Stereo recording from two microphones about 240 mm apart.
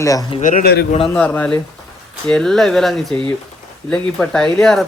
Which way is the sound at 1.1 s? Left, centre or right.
Centre.